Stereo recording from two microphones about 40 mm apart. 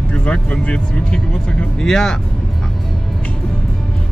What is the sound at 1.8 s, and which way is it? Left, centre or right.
Speech, centre.